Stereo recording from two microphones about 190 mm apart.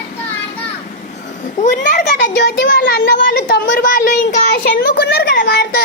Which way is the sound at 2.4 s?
60° left (ahead or behind).